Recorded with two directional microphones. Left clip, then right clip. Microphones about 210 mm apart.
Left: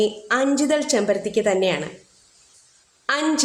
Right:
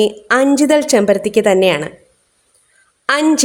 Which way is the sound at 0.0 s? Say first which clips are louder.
Right 7 dB; 50° right (ahead or behind).